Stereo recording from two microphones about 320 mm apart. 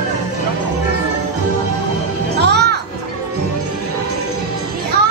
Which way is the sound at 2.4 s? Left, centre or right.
Right.